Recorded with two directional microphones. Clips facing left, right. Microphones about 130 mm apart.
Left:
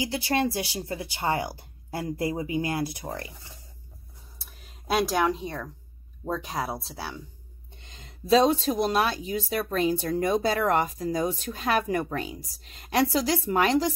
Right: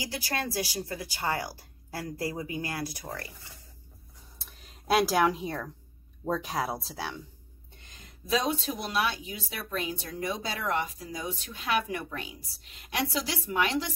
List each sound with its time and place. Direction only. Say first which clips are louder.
0.0 s speech: left 8 dB; 25° left (ahead or behind)
4.4 s a sound: even; 5° left (ahead or behind)
6.2 s speech: even; centre (ahead or behind)
7.8 s speech: left 7 dB; 25° left (ahead or behind)